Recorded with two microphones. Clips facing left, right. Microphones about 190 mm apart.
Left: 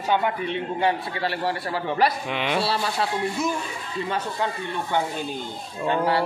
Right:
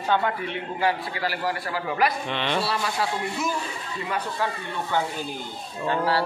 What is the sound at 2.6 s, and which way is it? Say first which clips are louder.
Speech: left 2 dB; 25° left (ahead or behind).